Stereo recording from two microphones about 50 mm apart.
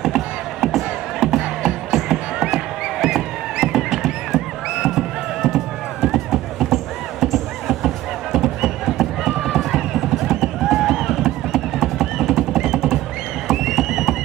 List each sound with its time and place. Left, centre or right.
0.0 s music: centre
1.4 s music: centre
1.9 s music: centre
13.5 s frog: centre